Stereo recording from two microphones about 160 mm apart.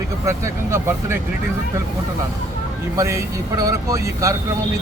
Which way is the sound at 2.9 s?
20° right (ahead or behind).